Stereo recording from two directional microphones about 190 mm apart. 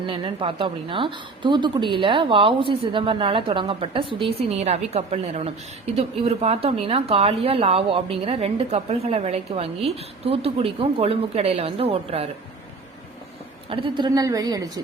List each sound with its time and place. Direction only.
0.0 s a woman's voice: 25° right (ahead or behind)
13.7 s a woman's voice: 25° right (ahead or behind)